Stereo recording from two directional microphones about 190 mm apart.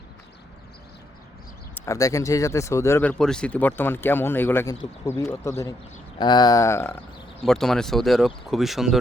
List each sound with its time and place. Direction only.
1.7 s speech: 15° left (ahead or behind); by 9.0 s centre (ahead or behind)